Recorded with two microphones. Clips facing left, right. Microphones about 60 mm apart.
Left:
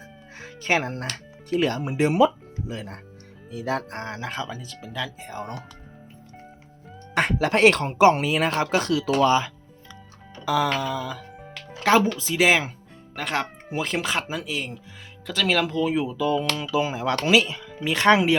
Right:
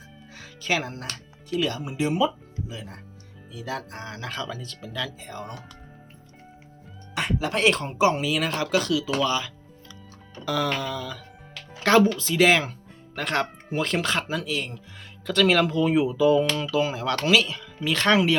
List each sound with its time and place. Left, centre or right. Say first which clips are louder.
0.3 s music: left 3 dB; left
1.5 s speech: left 3 dB; left
2.6 s speech: left 4 dB; left
4.2 s speech: left 1 dB; left
7.1 s music: left 5 dB; left
7.4 s speech: left 5 dB; left
8.2 s speech: left 3 dB; left
10.4 s speech: left 3 dB; centre
13.1 s speech: right 1 dB; centre
15.3 s speech: right 3 dB; centre
16.7 s speech: left 3 dB; centre